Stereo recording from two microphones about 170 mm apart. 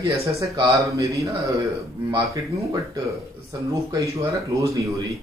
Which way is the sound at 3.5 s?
20° right (ahead or behind).